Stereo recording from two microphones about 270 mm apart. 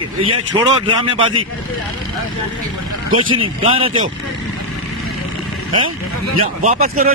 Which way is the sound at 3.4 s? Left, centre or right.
Centre.